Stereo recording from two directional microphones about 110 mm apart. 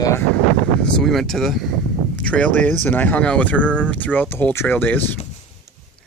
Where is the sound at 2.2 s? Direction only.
10° left (ahead or behind).